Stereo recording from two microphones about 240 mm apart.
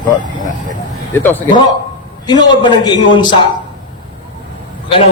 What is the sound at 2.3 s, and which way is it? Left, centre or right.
A man's voice, centre.